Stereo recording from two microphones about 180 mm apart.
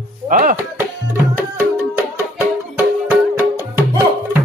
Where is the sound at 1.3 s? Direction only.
15° right (ahead or behind).